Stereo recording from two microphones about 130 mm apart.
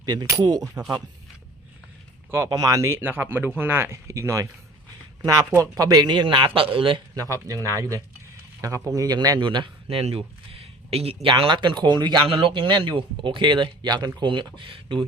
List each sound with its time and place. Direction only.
0.0 s a man's voice: 30° right (ahead or behind)
2.3 s a man's voice: 20° right (ahead or behind); by 7.0 s 45° right (ahead or behind)
7.2 s a man's voice: 25° right (ahead or behind)